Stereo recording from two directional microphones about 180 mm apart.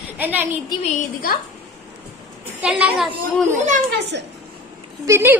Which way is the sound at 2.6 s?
10° right (ahead or behind).